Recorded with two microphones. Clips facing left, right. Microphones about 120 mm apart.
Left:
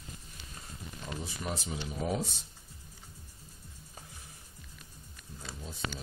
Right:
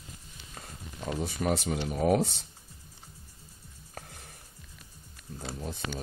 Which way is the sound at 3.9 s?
65° right (ahead or behind).